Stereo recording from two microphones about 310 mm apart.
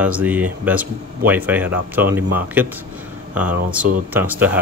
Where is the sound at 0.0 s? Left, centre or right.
Centre.